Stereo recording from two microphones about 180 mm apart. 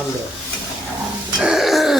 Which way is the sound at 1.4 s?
Centre (ahead or behind).